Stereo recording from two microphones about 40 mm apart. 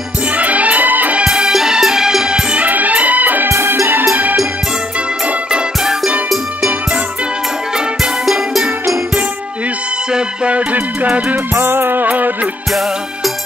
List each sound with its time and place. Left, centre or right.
0.4 s music: right
1.2 s music: right
1.5 s music: centre
2.5 s music: right
3.4 s music: right
3.9 s music: right
8.0 s music: centre
10.1 s music: right
10.7 s music: right
11.5 s music: right